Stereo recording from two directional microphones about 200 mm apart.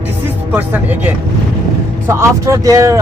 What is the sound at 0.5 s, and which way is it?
Speech, 10° right (ahead or behind).